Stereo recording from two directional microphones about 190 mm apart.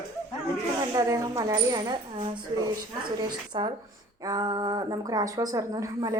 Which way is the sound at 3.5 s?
25° right (ahead or behind).